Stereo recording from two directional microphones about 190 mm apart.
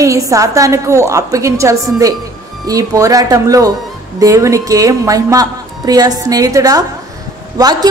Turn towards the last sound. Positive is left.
turn(degrees=-20)  # may be behind; listen again after turning